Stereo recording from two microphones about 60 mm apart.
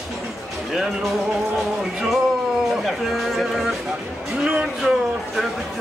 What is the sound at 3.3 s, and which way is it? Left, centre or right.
Music, centre.